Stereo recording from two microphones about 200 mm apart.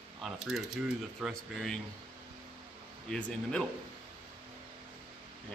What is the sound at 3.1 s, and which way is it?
Speech, 5° left (ahead or behind).